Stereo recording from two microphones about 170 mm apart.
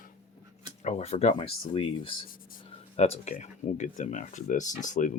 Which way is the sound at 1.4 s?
30° left (ahead or behind).